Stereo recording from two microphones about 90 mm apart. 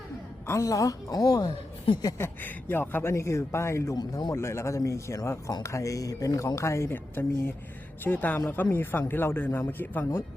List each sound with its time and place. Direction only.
0.4 s speech: 35° left (ahead or behind)
2.1 s speech: 25° left (ahead or behind)
3.9 s speech: 50° left (ahead or behind)
4.4 s speech: 30° left (ahead or behind)